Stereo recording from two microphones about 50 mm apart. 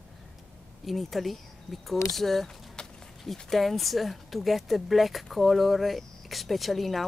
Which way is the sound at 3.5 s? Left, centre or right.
Centre.